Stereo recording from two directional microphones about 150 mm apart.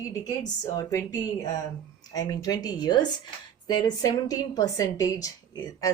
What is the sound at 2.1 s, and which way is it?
A woman's voice, 25° left (ahead or behind).